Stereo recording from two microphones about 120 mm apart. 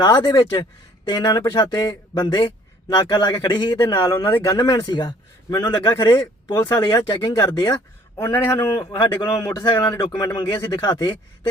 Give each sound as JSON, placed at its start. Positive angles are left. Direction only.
{"t": 0.0, "sound": "speech", "side_deg": 35}